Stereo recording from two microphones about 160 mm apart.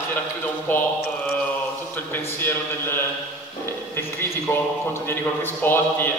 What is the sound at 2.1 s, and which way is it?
Speech, 15° left (ahead or behind).